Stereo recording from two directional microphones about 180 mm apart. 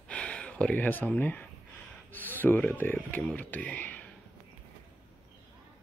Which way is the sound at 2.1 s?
10° left (ahead or behind).